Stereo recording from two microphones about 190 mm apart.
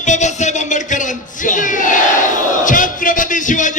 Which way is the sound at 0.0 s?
40° left (ahead or behind).